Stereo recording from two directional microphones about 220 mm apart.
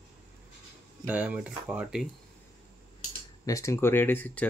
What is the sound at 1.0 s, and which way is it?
Speech, 5° right (ahead or behind).